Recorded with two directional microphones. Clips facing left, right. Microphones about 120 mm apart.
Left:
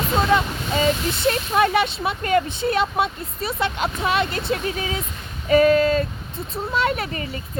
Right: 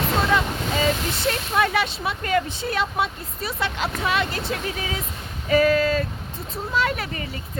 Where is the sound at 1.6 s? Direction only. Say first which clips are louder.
Left 2 dB; 25° left (ahead or behind).